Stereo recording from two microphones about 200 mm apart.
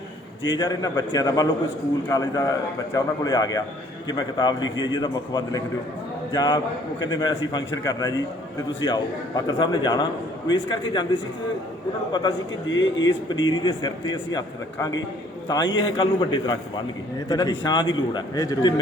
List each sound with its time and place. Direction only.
0.4 s a man's voice: 20° left (ahead or behind)
12.6 s speech: 70° left (ahead or behind)
13.4 s a man's voice: 20° left (ahead or behind)